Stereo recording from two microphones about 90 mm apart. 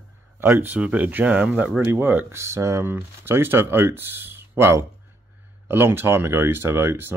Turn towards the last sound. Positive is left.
turn(degrees=-25)  # may be behind; listen again after turning